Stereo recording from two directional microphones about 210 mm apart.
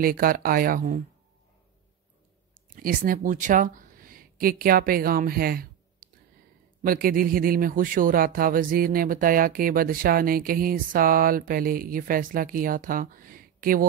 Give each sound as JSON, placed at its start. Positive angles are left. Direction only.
{"t": 0.0, "sound": "a man's voice", "side_deg": -45}
{"t": 2.7, "sound": "a man's voice", "side_deg": -40}